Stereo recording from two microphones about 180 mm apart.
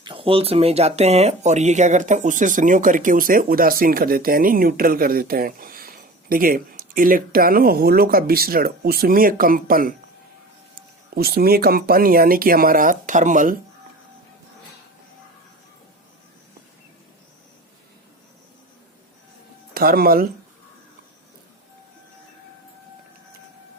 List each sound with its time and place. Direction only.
0.0 s speech: 30° right (ahead or behind); by 13.6 s 45° right (ahead or behind)
19.7 s speech: 55° right (ahead or behind)